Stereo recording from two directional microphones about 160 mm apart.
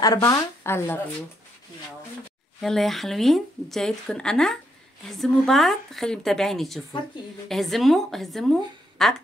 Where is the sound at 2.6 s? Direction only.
Centre (ahead or behind).